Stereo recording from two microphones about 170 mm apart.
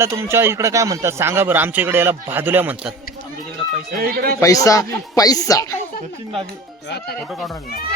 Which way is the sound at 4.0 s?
60° right (ahead or behind).